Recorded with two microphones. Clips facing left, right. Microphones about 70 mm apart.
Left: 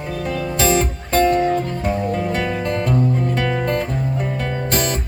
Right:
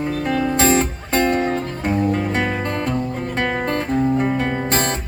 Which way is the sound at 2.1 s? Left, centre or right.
Right.